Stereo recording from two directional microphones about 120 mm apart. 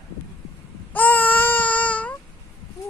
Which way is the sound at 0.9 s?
15° left (ahead or behind).